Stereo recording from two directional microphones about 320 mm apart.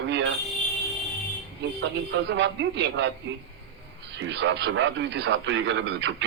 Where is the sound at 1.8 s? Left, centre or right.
Right.